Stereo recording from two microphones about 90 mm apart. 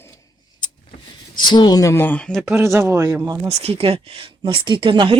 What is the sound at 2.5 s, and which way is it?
Speech, 30° right (ahead or behind).